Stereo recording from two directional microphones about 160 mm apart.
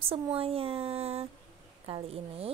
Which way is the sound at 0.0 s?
35° right (ahead or behind).